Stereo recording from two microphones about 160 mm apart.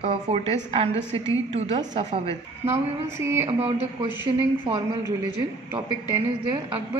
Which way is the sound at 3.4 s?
35° right (ahead or behind).